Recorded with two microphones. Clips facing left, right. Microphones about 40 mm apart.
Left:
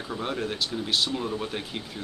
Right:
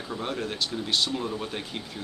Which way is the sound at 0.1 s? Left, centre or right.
Centre.